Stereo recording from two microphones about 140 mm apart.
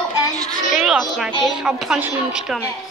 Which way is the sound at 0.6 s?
65° left (ahead or behind).